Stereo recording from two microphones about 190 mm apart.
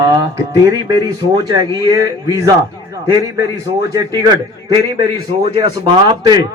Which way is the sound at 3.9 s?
20° right (ahead or behind).